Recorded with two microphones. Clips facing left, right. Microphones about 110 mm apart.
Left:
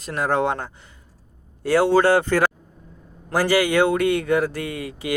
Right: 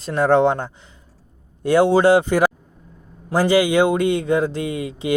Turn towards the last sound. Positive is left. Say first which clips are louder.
# right 4 dB
turn(degrees=-25)  # may be behind; listen again after turning